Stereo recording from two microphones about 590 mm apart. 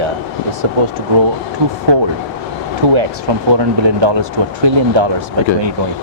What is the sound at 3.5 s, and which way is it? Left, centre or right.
Speech, right.